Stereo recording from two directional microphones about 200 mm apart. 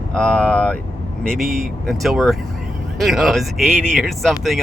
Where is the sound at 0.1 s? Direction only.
5° left (ahead or behind).